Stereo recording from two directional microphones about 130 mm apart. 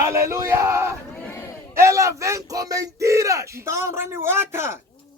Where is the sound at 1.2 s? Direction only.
15° left (ahead or behind).